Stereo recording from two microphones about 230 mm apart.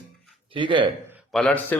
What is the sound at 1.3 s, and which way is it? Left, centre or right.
Speech, centre.